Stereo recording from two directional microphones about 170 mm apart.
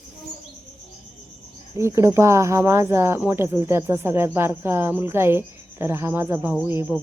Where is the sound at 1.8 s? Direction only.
15° right (ahead or behind).